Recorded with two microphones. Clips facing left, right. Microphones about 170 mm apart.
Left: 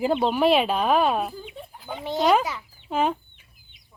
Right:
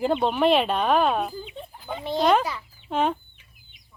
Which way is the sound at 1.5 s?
15° left (ahead or behind).